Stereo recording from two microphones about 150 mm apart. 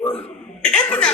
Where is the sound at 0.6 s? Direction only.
5° left (ahead or behind).